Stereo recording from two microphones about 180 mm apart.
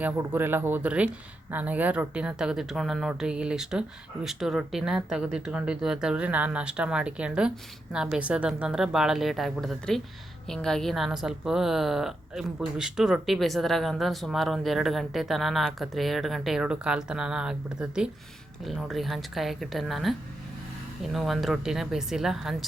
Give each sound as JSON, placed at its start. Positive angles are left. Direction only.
{"t": 0.0, "sound": "a woman's voice", "side_deg": -10}